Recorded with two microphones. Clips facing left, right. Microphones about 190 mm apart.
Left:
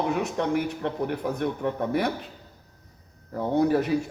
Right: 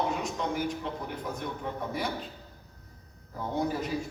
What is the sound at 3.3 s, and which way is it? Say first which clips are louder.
Speech: left 9 dB; 65° left (ahead or behind).